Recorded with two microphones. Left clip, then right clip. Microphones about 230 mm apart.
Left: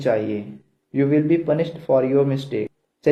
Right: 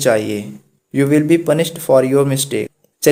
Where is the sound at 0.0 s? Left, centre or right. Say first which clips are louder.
Right 6 dB; right.